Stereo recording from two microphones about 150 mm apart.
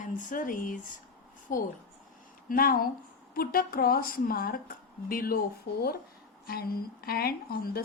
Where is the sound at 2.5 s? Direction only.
75° left (ahead or behind).